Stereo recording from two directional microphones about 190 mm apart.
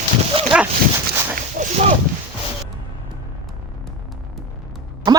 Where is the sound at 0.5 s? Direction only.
5° right (ahead or behind).